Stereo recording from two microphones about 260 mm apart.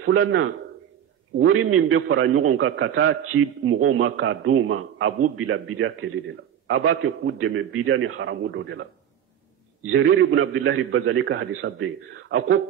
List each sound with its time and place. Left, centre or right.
0.0 s a man's voice: right
1.5 s a man's voice: right
9.8 s a man's voice: right